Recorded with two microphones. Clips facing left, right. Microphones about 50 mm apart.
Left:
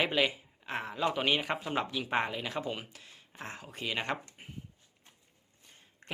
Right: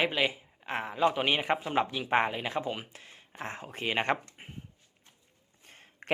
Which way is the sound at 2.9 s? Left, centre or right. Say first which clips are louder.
Right 3 dB; right.